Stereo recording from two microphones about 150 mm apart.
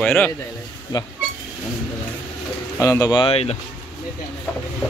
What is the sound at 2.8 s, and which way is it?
Speech, 20° left (ahead or behind).